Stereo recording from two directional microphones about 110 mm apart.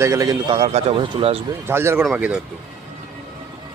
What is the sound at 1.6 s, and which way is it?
Speech, 20° right (ahead or behind).